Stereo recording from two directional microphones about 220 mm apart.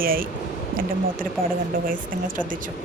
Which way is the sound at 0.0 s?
40° right (ahead or behind).